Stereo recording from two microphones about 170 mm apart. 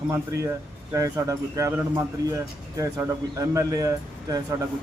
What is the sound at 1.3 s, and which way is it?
A man's voice, 20° right (ahead or behind).